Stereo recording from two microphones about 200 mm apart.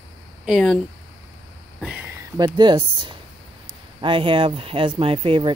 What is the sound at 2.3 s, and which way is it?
Speech, 20° right (ahead or behind).